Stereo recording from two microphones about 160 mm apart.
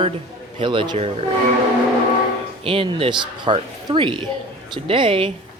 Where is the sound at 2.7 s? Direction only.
35° right (ahead or behind).